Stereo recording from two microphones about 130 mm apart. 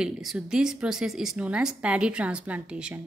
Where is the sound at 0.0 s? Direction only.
5° right (ahead or behind).